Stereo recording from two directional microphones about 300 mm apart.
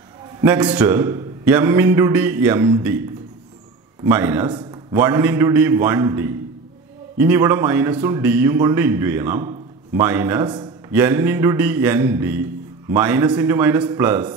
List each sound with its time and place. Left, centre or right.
0.4 s a man's voice: centre